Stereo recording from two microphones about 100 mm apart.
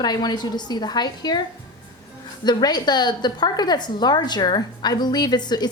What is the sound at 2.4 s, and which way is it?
A woman's voice, 45° left (ahead or behind).